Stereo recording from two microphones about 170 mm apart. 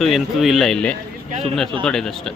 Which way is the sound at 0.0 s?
Centre (ahead or behind).